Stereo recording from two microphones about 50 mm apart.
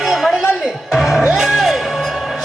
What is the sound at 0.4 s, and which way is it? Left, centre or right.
Music, centre.